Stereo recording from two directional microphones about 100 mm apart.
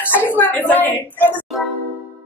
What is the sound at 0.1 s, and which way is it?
A woman's voice, 20° left (ahead or behind).